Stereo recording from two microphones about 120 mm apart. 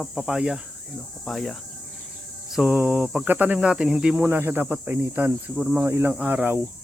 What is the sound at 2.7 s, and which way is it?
Speech, 15° right (ahead or behind).